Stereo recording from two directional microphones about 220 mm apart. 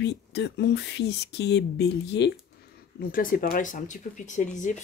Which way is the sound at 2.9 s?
40° left (ahead or behind).